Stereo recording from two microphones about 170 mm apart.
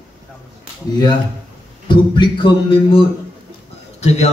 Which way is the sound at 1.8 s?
30° left (ahead or behind).